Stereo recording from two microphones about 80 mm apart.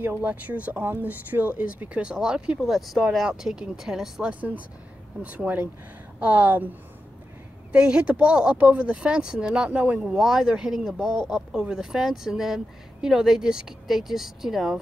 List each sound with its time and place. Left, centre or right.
0.0 s speech: right
7.7 s speech: centre